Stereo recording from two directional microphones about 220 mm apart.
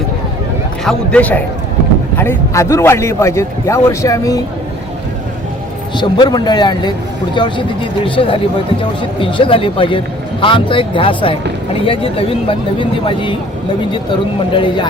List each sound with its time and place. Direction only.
0.9 s a man's voice: 5° left (ahead or behind)
6.0 s speech: 20° left (ahead or behind)
14.5 s speech: 20° left (ahead or behind)